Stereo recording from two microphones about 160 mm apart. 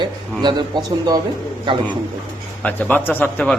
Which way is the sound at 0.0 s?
30° right (ahead or behind).